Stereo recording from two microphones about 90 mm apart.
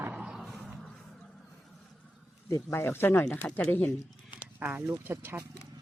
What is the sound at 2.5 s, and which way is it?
Speech, 30° left (ahead or behind).